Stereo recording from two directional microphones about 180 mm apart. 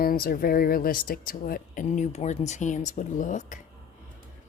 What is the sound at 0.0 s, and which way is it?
Speech, 55° left (ahead or behind).